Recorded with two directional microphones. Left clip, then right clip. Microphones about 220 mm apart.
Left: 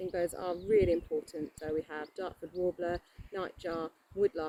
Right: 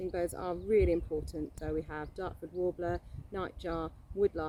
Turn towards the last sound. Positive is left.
turn(degrees=-10)  # may be behind; listen again after turning